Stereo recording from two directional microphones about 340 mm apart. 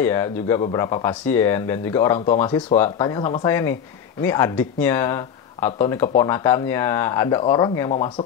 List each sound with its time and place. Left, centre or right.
0.0 s speech: centre
2.1 s speech: left
2.4 s speech: centre